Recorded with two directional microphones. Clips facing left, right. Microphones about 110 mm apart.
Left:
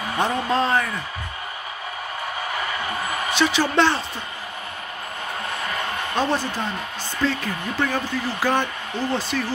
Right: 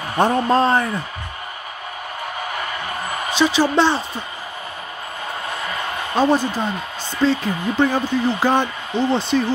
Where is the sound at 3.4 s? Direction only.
15° right (ahead or behind).